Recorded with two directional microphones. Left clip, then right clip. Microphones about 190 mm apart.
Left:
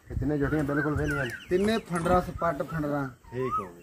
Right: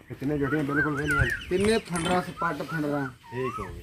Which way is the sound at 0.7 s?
5° right (ahead or behind).